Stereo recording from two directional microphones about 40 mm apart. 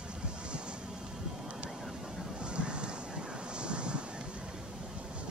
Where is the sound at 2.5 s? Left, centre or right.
Right.